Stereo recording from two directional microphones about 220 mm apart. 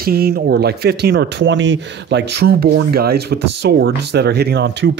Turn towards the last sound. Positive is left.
turn(degrees=-50)  # may be behind; listen again after turning